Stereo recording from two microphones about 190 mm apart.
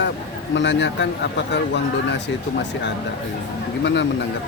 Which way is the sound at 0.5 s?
70° left (ahead or behind).